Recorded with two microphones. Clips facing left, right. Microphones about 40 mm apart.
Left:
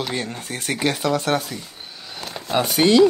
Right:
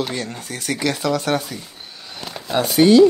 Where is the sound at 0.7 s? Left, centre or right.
Left.